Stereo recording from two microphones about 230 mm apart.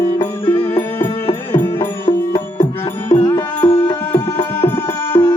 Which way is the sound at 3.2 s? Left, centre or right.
Centre.